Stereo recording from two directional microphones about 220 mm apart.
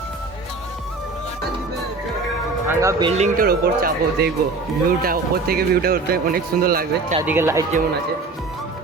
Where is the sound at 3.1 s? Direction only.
30° right (ahead or behind).